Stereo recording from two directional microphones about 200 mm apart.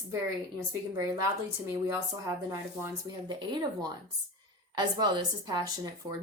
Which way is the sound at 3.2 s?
20° right (ahead or behind).